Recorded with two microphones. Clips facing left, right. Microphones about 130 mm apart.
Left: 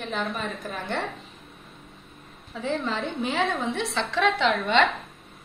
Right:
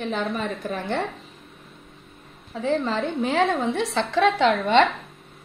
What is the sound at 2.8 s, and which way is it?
A woman's voice, 40° right (ahead or behind).